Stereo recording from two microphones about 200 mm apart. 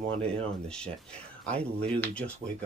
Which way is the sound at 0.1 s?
30° right (ahead or behind).